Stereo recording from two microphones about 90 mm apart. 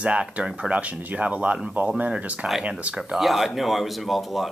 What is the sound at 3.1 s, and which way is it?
Speech, centre (ahead or behind).